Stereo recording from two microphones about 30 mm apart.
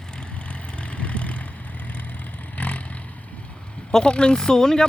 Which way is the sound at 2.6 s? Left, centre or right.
Left.